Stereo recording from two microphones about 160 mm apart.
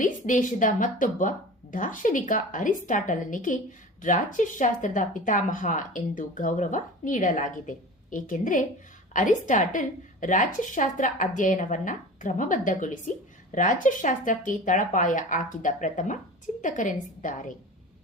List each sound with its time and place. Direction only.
0.0 s a woman's voice: 55° left (ahead or behind)